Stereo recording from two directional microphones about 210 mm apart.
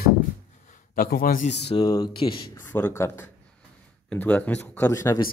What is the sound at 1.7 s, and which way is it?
Speech, 20° left (ahead or behind).